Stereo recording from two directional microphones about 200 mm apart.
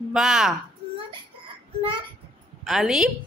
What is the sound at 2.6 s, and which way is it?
Speech, centre (ahead or behind).